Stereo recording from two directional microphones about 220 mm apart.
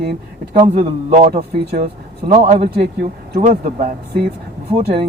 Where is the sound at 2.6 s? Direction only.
45° right (ahead or behind).